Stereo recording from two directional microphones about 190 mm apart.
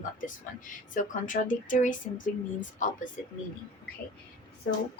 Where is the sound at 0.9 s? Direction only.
45° left (ahead or behind).